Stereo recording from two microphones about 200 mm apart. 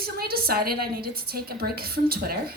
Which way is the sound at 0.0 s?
50° right (ahead or behind).